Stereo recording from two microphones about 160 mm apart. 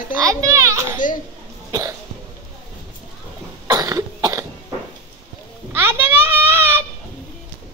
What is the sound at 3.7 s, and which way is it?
Cough, 20° right (ahead or behind).